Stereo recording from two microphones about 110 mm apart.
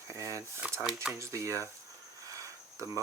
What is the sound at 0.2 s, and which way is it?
Speech, 30° right (ahead or behind).